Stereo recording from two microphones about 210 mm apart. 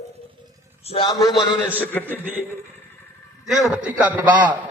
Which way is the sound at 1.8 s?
10° left (ahead or behind).